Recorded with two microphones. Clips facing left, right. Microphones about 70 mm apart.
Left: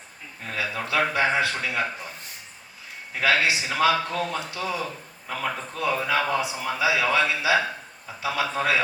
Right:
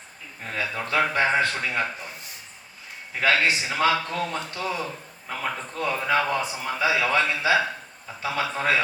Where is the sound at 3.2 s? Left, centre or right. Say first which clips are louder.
Even; right.